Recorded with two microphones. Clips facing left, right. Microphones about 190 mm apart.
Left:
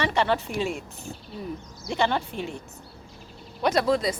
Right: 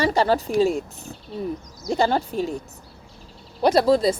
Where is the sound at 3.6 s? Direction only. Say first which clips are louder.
Right 5 dB; 35° right (ahead or behind).